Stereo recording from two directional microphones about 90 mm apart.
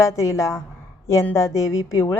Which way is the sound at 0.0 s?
35° left (ahead or behind).